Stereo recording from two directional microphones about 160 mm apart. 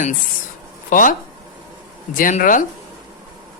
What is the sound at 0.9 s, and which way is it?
Speech, 55° left (ahead or behind).